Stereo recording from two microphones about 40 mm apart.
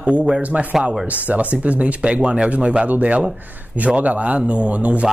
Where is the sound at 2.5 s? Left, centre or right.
Right.